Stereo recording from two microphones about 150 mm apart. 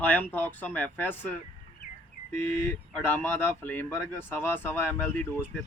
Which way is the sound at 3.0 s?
15° left (ahead or behind).